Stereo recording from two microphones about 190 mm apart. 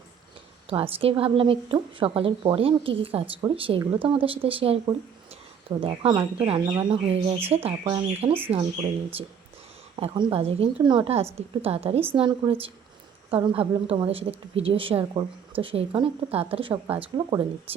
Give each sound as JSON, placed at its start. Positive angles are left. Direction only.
{"t": 0.7, "sound": "a woman's voice", "side_deg": -30}